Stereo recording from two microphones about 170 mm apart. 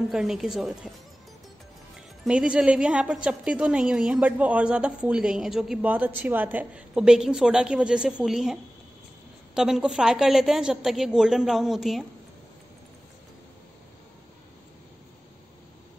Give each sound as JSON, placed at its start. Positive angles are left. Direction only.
{"t": 0.1, "sound": "a woman's voice", "side_deg": -5}
{"t": 2.0, "sound": "a woman's voice", "side_deg": -5}